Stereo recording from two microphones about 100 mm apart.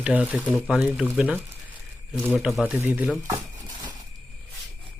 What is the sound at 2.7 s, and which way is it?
Speech, 20° right (ahead or behind).